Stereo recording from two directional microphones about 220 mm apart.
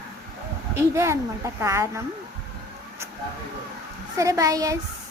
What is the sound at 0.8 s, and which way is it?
A woman's voice, 10° right (ahead or behind).